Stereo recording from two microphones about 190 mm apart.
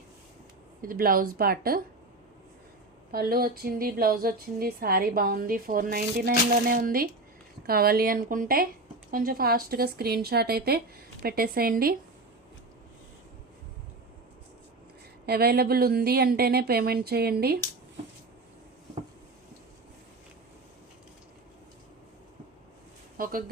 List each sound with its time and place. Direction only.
0.8 s speech: 50° right (ahead or behind)
3.1 s speech: 50° right (ahead or behind)
15.3 s a woman's voice: 55° right (ahead or behind)
23.1 s a sound: 50° right (ahead or behind)